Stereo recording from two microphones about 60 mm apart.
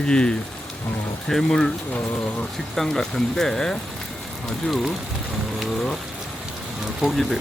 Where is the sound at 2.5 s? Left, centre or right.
Centre.